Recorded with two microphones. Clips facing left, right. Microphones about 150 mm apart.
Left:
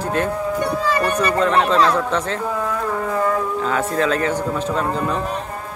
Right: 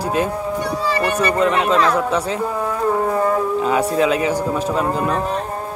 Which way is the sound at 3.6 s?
15° right (ahead or behind).